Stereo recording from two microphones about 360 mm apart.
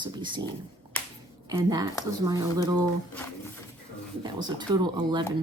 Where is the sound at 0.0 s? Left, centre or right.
Centre.